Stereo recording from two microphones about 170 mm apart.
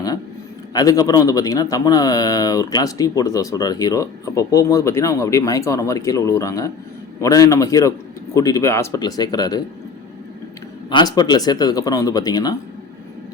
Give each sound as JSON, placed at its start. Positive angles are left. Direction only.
{"t": 0.7, "sound": "speech", "side_deg": 20}
{"t": 10.8, "sound": "speech", "side_deg": 25}